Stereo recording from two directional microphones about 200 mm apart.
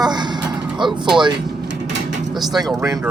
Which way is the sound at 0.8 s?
25° right (ahead or behind).